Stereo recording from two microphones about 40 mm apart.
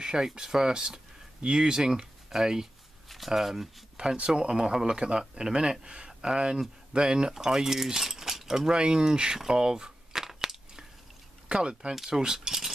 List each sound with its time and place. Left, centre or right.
0.0 s speech: centre
4.0 s speech: right
4.4 s speech: centre
9.4 s a sound: centre
11.4 s speech: right
12.1 s keys jangling: centre